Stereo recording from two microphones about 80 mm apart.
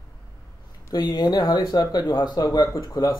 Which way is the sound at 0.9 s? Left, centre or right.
Left.